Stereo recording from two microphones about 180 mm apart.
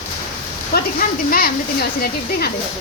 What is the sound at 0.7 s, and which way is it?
Speech, 55° left (ahead or behind).